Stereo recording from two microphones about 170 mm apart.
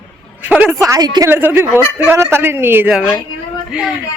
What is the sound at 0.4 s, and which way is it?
A woman's voice, 10° right (ahead or behind).